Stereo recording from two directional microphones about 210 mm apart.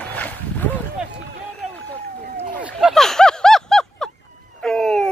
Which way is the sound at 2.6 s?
5° right (ahead or behind).